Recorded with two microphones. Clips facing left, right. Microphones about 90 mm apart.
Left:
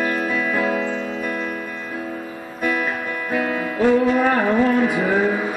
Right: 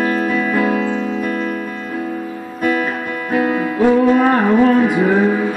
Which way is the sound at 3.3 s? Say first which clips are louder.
Right 6 dB; 15° right (ahead or behind).